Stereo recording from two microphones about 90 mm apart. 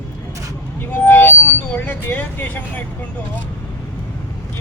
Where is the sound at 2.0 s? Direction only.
20° left (ahead or behind).